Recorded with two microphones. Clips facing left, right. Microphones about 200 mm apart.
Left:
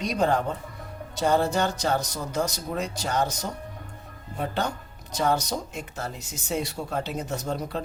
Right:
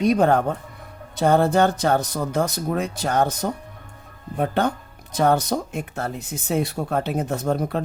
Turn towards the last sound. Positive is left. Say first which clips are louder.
# right 7 dB
turn(degrees=-55)  # may be behind; listen again after turning